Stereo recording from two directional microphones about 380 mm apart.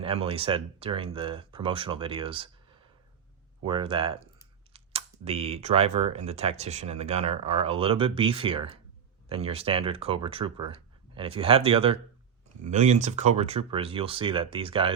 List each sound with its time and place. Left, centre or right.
0.0 s speech: centre
3.6 s speech: centre